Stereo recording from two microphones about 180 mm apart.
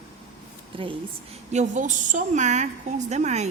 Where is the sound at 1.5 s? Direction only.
45° right (ahead or behind).